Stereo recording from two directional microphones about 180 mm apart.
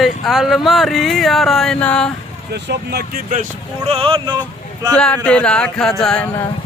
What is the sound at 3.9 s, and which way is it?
Speech, 30° right (ahead or behind).